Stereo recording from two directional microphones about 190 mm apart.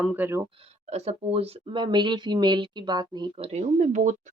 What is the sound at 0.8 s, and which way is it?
Speech, 35° right (ahead or behind).